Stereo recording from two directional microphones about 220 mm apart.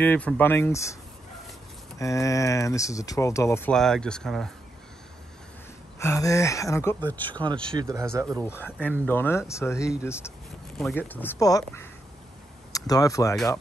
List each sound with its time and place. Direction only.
0.0 s speech: 5° left (ahead or behind)
2.0 s speech: 15° left (ahead or behind)
5.9 s speech: 15° left (ahead or behind)
7.8 s speech: 15° right (ahead or behind)
8.4 s speech: 10° left (ahead or behind)